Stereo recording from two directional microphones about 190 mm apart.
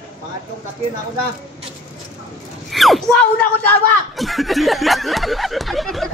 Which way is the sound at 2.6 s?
Centre (ahead or behind).